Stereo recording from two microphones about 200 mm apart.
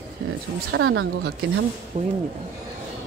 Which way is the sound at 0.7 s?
70° right (ahead or behind).